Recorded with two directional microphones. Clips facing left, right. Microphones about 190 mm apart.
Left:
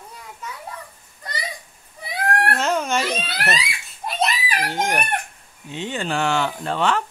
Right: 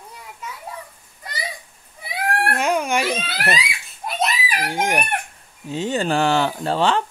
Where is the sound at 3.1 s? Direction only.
Centre (ahead or behind).